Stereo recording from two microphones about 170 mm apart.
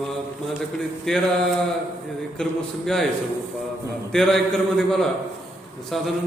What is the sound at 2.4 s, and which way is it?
Mantra, 5° left (ahead or behind).